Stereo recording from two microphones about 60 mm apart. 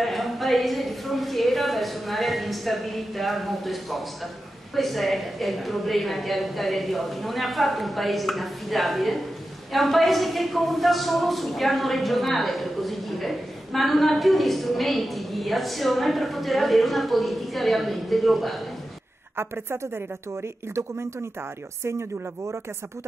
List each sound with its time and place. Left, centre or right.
0.0 s a sound: centre
4.7 s a woman's voice: centre
19.3 s a woman's voice: right